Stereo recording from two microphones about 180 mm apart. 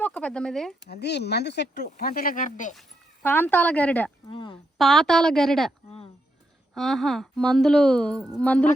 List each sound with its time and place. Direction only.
0.0 s speech: 5° left (ahead or behind)
0.9 s speech: 65° left (ahead or behind); by 2.7 s 45° left (ahead or behind)
3.2 s speech: 10° left (ahead or behind)
4.3 s speech: 25° left (ahead or behind)
4.8 s a woman's voice: centre (ahead or behind)
6.7 s a woman's voice: centre (ahead or behind)